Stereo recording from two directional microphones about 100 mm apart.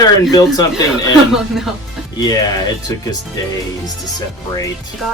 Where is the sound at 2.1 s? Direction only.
40° left (ahead or behind).